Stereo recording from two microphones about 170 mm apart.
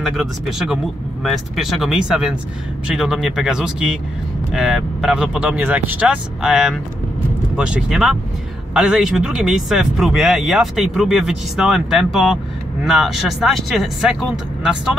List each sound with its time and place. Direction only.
0.0 s speech: centre (ahead or behind)